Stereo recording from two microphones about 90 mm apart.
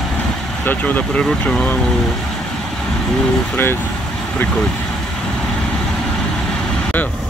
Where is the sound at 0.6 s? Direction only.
20° left (ahead or behind).